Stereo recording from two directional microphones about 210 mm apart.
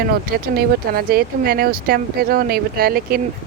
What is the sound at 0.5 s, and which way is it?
Speech, 45° right (ahead or behind).